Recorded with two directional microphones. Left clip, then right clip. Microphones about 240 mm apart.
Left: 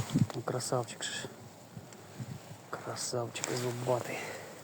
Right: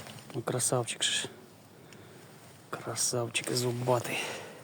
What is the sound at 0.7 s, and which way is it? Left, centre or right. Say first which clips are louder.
Speech: right 5 dB; right.